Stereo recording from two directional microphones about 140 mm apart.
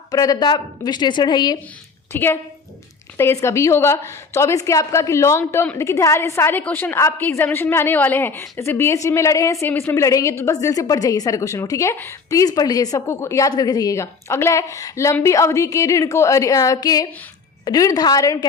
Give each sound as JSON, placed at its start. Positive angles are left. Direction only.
{"t": 0.1, "sound": "a woman's voice", "side_deg": 25}
{"t": 2.1, "sound": "a woman's voice", "side_deg": 15}